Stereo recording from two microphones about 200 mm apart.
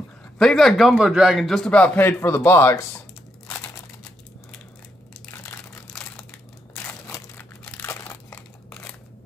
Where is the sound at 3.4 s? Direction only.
15° left (ahead or behind).